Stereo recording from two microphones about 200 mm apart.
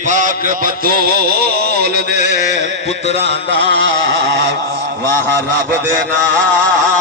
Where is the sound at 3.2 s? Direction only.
60° right (ahead or behind).